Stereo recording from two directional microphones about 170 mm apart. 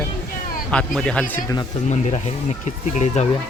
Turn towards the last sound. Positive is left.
turn(degrees=40)  # may be behind; listen again after turning